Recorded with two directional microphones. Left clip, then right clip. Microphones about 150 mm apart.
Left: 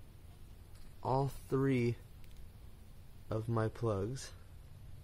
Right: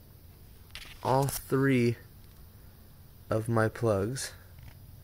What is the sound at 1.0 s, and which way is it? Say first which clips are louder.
Speech: right 7 dB; 30° right (ahead or behind).